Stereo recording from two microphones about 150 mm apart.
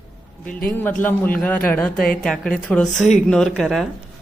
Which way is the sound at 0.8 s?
10° left (ahead or behind).